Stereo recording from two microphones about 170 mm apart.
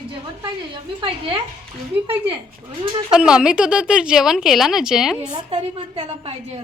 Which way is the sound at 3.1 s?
5° right (ahead or behind).